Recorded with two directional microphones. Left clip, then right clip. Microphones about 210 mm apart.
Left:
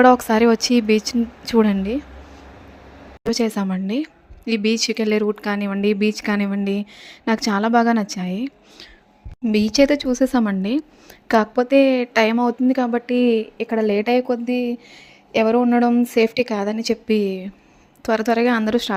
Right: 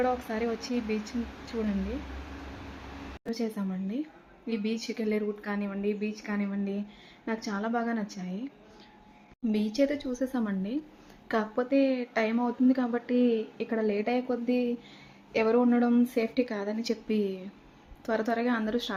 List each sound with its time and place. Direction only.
0.0 s speech: 50° left (ahead or behind)
3.2 s a woman's voice: 50° left (ahead or behind)